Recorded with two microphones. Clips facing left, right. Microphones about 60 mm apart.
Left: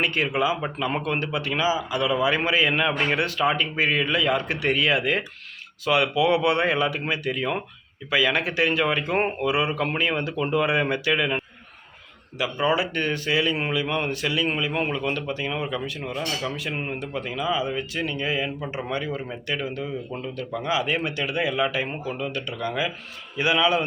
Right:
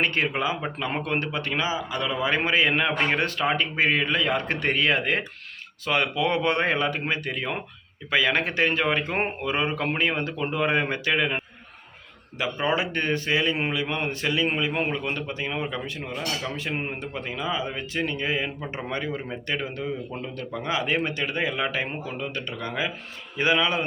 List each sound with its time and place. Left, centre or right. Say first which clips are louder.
0.0 s speech: left 1 dB; right
12.4 s speech: left 2 dB; right